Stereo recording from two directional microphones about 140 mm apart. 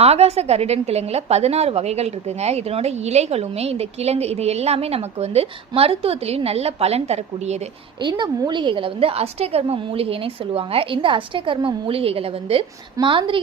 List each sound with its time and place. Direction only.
0.0 s a woman's voice: 50° right (ahead or behind)
8.0 s a woman's voice: 30° right (ahead or behind)